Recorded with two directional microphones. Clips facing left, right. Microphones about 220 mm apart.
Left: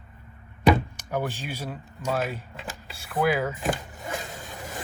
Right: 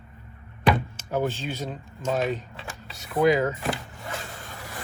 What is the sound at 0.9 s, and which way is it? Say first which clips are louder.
Speech: right 3 dB; 10° left (ahead or behind).